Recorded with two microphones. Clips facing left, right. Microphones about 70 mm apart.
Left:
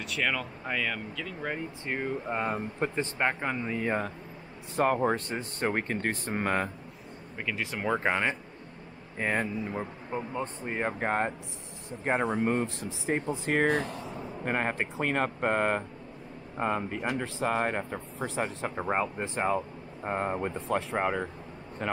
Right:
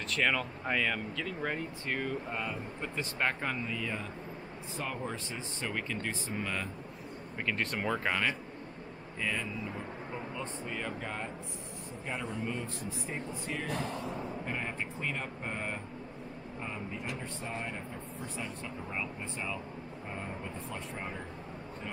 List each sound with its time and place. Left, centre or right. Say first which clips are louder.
0.1 s speech: even; centre
1.9 s speech: left 4 dB; left
2.4 s speech: left 8 dB; left
3.2 s speech: left 3 dB; centre
3.6 s speech: left 7 dB; left
7.3 s speech: even; centre
7.9 s speech: left 6 dB; left
9.2 s speech: left 6 dB; left
12.6 s speech: left 7 dB; left
13.8 s speech: right 1 dB; centre
14.4 s speech: left 7 dB; left
20.5 s speech: left 11 dB; left